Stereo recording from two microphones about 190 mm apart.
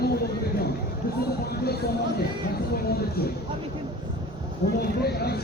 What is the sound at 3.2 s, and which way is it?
Speech, 55° left (ahead or behind).